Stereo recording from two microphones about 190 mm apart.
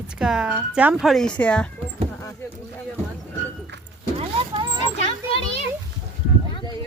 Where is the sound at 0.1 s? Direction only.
5° right (ahead or behind).